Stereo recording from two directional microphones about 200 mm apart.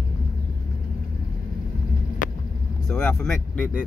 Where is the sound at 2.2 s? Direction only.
40° left (ahead or behind).